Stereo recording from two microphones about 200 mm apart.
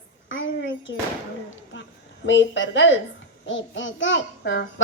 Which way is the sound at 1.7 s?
70° left (ahead or behind).